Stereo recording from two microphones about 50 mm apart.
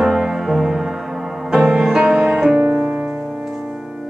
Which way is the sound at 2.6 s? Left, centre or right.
Right.